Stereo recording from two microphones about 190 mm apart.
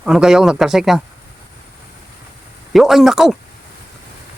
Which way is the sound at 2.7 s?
Centre (ahead or behind).